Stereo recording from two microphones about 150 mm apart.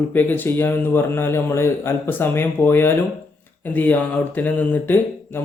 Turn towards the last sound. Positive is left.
turn(degrees=10)  # may be behind; listen again after turning